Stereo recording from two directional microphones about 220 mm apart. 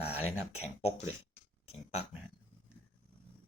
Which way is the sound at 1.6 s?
25° left (ahead or behind).